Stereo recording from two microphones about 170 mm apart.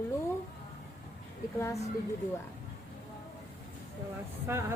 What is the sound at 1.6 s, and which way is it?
Speech, 15° left (ahead or behind).